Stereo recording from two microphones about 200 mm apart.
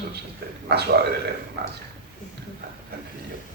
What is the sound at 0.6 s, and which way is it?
Speech, 55° right (ahead or behind).